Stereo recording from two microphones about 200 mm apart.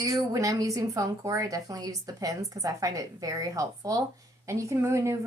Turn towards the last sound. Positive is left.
turn(degrees=-15)  # may be behind; listen again after turning